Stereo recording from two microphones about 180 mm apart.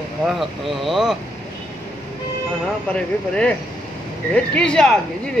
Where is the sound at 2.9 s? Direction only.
5° left (ahead or behind).